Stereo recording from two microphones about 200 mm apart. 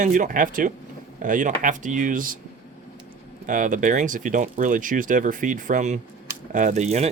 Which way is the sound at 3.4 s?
40° right (ahead or behind).